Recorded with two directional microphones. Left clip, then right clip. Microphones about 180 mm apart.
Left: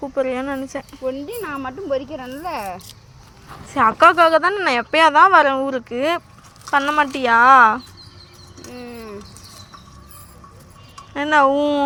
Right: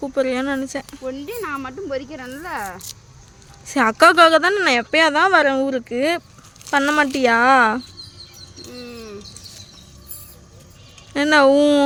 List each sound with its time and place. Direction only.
0.1 s speech: 30° right (ahead or behind); by 2.7 s 15° right (ahead or behind)
3.7 s speech: 35° right (ahead or behind)
8.6 s bird: 30° right (ahead or behind)
11.1 s speech: 50° right (ahead or behind)